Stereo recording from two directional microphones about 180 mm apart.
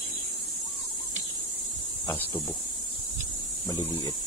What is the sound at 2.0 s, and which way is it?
Speech, 10° left (ahead or behind).